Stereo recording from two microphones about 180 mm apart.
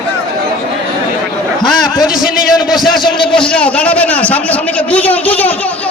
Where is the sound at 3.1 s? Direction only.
25° left (ahead or behind).